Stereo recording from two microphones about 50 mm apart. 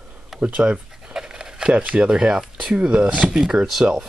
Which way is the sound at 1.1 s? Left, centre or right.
Centre.